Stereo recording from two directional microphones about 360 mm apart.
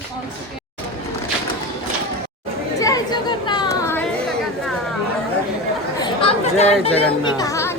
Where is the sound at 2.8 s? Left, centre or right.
Centre.